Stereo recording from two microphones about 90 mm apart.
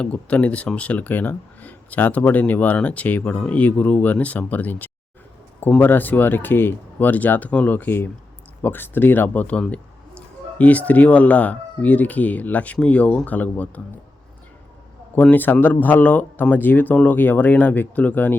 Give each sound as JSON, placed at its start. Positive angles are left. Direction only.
{"t": 0.0, "sound": "speech", "side_deg": 15}
{"t": 15.1, "sound": "speech", "side_deg": 20}